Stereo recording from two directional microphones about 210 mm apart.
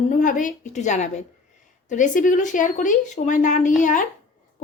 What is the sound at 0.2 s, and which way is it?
A woman's voice, 40° left (ahead or behind).